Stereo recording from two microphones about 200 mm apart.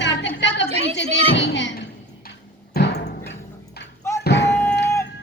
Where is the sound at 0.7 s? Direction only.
30° right (ahead or behind).